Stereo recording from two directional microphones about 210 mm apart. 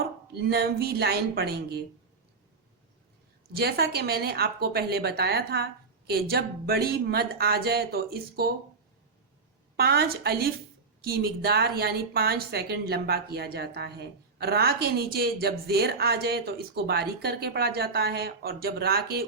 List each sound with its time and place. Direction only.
0.0 s a woman's voice: 50° right (ahead or behind)
3.5 s a woman's voice: 50° right (ahead or behind)
9.7 s a woman's voice: 50° right (ahead or behind)